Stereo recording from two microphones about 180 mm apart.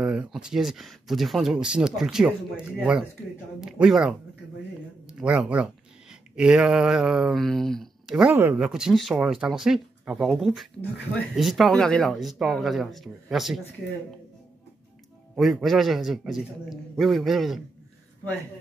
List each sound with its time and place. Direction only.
0.0 s speech: 5° right (ahead or behind)
15.3 s speech: centre (ahead or behind)